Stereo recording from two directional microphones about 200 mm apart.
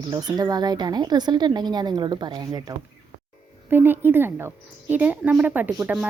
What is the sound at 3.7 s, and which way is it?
Speech, 10° right (ahead or behind).